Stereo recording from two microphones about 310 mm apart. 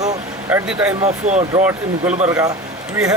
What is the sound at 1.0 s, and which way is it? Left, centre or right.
Speech, right.